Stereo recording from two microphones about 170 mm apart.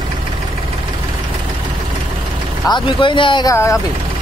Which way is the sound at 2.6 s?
25° left (ahead or behind).